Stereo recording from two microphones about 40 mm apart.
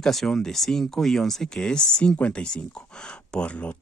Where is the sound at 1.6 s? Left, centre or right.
Left.